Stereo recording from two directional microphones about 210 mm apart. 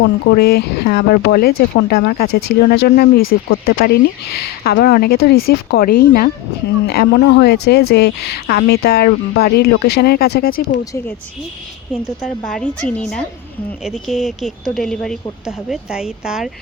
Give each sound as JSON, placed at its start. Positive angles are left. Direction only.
{"t": 0.0, "sound": "speech", "side_deg": 55}
{"t": 12.2, "sound": "speech", "side_deg": 0}